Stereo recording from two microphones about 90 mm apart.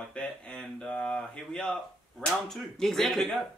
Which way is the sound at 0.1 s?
10° left (ahead or behind).